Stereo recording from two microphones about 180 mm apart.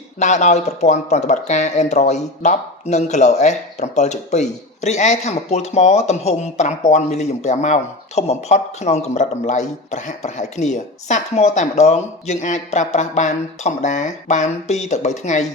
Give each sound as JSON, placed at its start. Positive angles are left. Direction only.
{"t": 0.2, "sound": "speech", "side_deg": 40}